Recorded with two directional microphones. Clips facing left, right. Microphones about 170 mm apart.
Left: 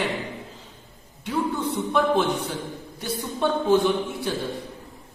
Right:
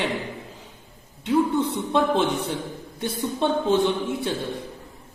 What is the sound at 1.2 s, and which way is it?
Speech, 25° right (ahead or behind).